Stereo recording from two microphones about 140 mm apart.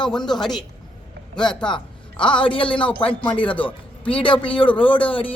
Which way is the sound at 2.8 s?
10° left (ahead or behind).